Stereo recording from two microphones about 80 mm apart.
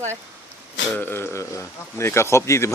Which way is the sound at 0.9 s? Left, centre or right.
Left.